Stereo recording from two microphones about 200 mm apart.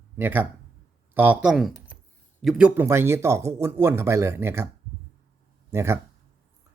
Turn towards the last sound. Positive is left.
turn(degrees=-15)  # may be behind; listen again after turning